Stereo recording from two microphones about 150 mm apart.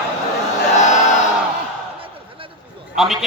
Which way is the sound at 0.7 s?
55° left (ahead or behind).